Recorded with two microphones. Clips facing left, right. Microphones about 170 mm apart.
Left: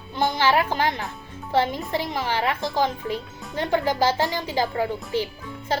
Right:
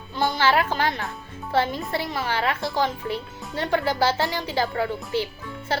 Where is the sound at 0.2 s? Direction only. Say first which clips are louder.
Even; 15° left (ahead or behind).